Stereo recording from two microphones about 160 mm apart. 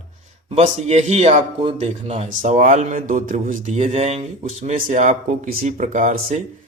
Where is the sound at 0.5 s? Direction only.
45° right (ahead or behind).